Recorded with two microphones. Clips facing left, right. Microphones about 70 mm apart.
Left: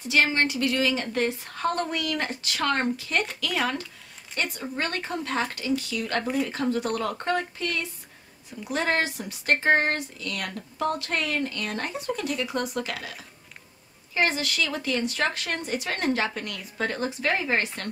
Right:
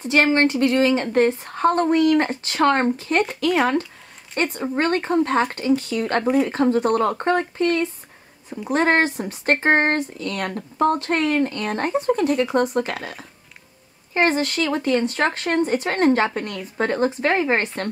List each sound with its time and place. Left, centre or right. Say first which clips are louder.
0.0 s speech: right 6 dB; right